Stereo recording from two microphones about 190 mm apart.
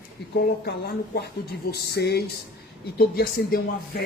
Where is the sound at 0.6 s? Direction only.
60° left (ahead or behind).